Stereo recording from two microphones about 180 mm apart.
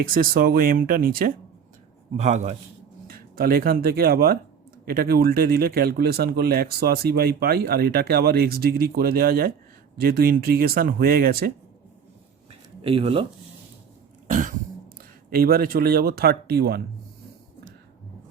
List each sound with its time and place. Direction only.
0.0 s speech: 50° right (ahead or behind)
2.1 s speech: 40° right (ahead or behind)
3.1 s speech: 55° right (ahead or behind)
12.8 s speech: 30° right (ahead or behind)
14.3 s throat clearing: 45° right (ahead or behind)
15.3 s speech: 55° right (ahead or behind)